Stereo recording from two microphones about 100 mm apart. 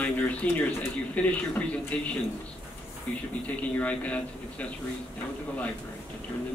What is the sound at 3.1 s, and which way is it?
A man's voice, 15° left (ahead or behind).